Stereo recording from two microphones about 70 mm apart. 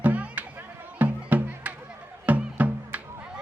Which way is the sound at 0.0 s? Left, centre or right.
Right.